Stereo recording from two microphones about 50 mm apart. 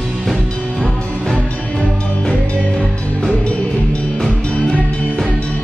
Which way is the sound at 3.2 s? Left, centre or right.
Left.